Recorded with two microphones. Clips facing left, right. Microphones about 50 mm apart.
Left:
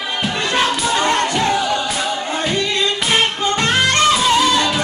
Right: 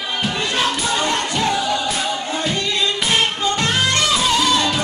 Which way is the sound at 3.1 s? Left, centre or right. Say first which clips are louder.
Left 3 dB; left.